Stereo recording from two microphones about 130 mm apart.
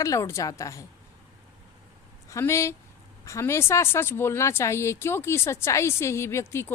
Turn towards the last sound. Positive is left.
turn(degrees=20)  # may be behind; listen again after turning